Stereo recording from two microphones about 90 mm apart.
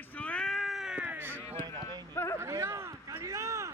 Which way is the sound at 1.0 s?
20° right (ahead or behind).